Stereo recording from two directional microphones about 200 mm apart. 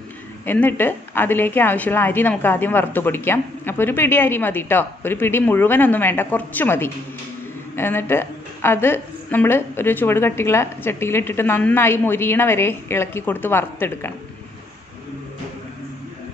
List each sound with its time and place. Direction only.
0.5 s a woman's voice: 10° left (ahead or behind)